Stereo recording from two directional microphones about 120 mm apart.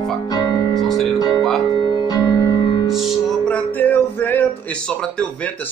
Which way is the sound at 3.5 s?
15° left (ahead or behind).